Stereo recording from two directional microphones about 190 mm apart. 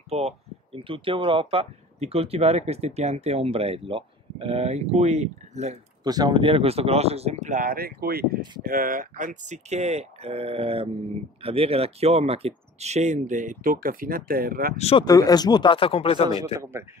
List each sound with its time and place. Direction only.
0.1 s speech: 35° right (ahead or behind)
6.0 s speech: 20° right (ahead or behind); by 14.8 s 50° right (ahead or behind)
14.8 s speech: 30° left (ahead or behind)
15.0 s speech: 20° left (ahead or behind)